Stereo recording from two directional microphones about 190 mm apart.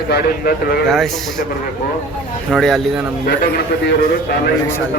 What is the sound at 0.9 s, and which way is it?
Speech, centre (ahead or behind).